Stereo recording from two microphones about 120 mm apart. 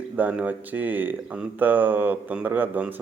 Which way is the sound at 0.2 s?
15° right (ahead or behind).